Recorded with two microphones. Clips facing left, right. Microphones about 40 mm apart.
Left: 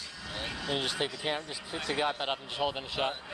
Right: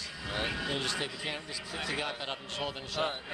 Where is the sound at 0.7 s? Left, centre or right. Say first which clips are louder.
Left 2 dB; left.